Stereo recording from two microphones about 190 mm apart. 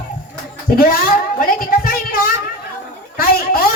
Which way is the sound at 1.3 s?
50° left (ahead or behind).